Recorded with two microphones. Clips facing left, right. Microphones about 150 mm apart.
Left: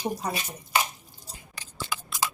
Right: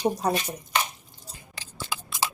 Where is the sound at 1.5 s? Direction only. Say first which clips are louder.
Even; 30° right (ahead or behind).